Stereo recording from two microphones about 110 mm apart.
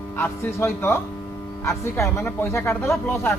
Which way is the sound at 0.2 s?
20° left (ahead or behind).